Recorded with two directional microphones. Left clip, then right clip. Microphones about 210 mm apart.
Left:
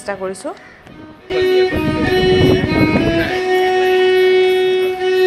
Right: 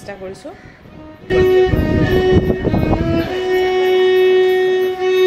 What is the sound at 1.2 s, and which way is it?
Music, 15° left (ahead or behind).